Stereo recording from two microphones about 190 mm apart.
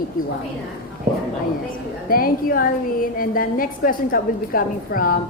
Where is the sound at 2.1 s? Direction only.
50° left (ahead or behind).